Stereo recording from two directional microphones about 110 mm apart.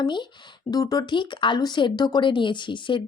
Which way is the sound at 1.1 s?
45° left (ahead or behind).